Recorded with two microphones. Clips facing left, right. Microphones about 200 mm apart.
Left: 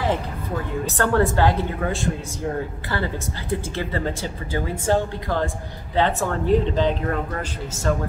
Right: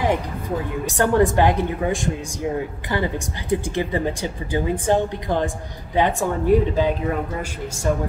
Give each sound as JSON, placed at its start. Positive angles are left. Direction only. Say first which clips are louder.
{"t": 0.8, "sound": "speech", "louder": "right 3 dB", "side_deg": -15}